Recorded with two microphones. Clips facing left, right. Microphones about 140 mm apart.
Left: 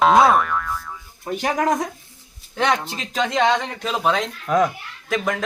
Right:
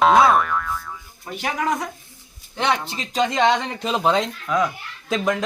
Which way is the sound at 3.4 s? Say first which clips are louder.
Left 1 dB; 20° right (ahead or behind).